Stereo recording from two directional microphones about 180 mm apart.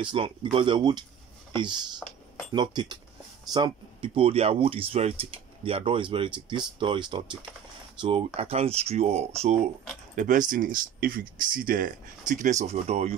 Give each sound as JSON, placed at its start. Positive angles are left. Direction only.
{"t": 0.0, "sound": "speech", "side_deg": -30}